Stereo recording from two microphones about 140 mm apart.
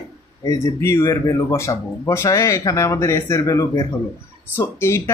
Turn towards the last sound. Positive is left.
turn(degrees=20)  # may be behind; listen again after turning